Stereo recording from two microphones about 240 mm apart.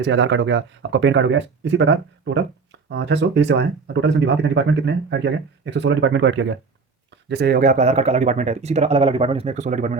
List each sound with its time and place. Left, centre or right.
0.0 s speech: right